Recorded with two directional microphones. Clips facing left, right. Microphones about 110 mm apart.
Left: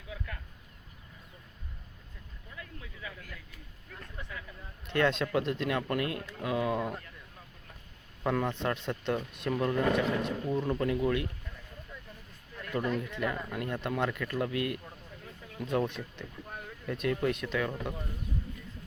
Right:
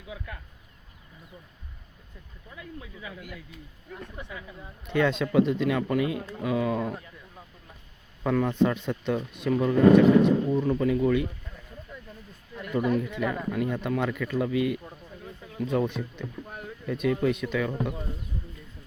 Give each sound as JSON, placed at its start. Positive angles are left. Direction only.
{"t": 2.6, "sound": "speech", "side_deg": -15}
{"t": 4.9, "sound": "speech", "side_deg": 0}
{"t": 8.2, "sound": "speech", "side_deg": 0}
{"t": 12.7, "sound": "speech", "side_deg": -5}